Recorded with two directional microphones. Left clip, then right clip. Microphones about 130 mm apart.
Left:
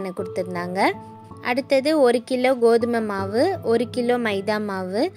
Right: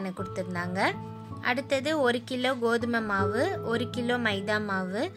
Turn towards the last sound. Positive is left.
turn(degrees=25)  # may be behind; listen again after turning